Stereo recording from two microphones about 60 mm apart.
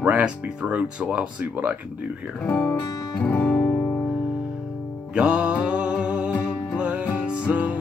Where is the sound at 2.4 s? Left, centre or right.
Left.